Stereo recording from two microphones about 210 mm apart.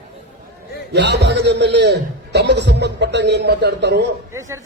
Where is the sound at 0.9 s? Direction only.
55° right (ahead or behind).